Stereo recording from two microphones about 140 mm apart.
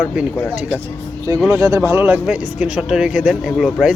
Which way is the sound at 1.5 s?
25° right (ahead or behind).